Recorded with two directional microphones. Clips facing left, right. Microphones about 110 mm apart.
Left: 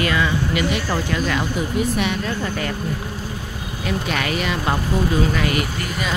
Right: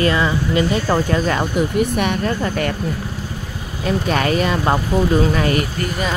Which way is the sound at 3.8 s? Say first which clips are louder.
Right 5 dB; 40° right (ahead or behind).